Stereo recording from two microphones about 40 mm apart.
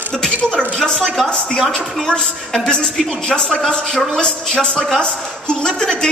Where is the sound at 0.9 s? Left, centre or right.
Centre.